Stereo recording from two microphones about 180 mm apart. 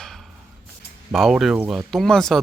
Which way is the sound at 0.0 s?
Centre (ahead or behind).